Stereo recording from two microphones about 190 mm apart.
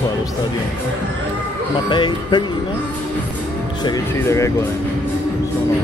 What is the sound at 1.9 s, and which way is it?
Speech, 25° left (ahead or behind).